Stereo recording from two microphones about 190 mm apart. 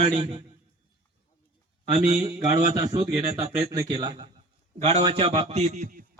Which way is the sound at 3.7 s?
20° right (ahead or behind).